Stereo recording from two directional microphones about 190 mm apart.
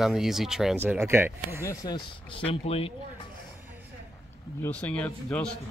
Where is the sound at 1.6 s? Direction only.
20° left (ahead or behind).